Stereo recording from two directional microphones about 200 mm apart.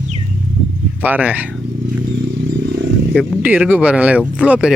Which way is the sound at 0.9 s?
10° right (ahead or behind).